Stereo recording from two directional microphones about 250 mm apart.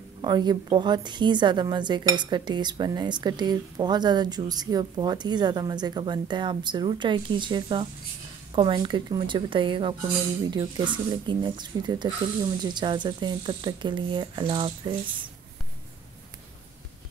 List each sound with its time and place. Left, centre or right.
0.2 s a woman's voice: centre